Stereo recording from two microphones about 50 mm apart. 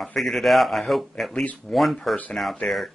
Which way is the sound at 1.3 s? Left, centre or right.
Left.